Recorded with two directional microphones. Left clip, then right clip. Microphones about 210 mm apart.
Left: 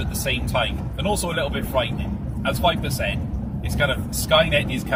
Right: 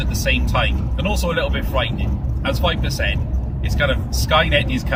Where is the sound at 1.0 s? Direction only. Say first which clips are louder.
Right 2 dB; 20° right (ahead or behind).